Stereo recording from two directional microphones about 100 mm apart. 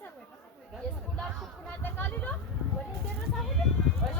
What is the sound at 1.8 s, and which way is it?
Speech, 20° left (ahead or behind).